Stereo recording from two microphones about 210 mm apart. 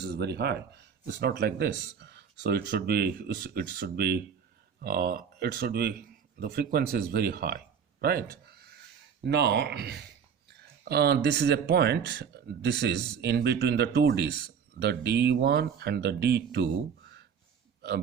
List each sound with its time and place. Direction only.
0.0 s speech: 50° right (ahead or behind)